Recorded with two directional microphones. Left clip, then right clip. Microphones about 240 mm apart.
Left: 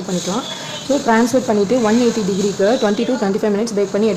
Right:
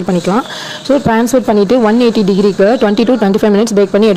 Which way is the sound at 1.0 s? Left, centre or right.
Right.